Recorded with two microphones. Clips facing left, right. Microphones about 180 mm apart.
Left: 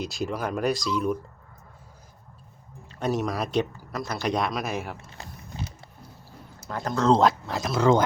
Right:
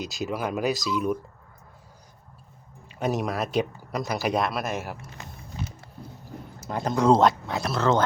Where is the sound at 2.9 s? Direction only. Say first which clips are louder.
Even; 10° right (ahead or behind).